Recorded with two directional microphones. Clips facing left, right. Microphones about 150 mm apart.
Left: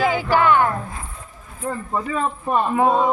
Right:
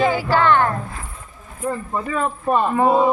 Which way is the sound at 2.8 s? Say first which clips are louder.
Right 2 dB; 5° right (ahead or behind).